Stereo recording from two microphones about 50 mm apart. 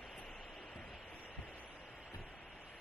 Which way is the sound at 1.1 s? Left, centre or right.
Left.